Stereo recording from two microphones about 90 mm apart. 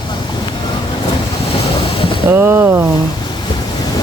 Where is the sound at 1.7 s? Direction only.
90° left.